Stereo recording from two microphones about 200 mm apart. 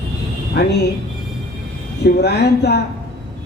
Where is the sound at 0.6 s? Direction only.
55° left (ahead or behind).